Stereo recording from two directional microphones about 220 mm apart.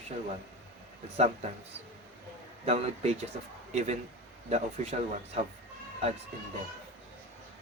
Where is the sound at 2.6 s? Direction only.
30° right (ahead or behind).